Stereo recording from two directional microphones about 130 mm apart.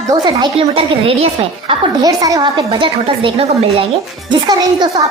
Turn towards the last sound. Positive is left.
turn(degrees=-35)  # may be behind; listen again after turning